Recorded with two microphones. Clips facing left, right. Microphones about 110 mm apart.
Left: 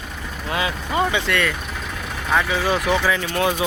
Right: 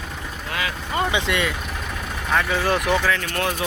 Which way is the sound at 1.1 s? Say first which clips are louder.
Left 1 dB; 15° right (ahead or behind).